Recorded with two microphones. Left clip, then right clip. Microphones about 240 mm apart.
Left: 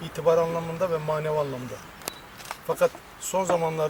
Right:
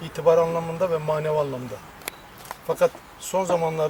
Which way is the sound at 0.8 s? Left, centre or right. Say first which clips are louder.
Right 2 dB; centre.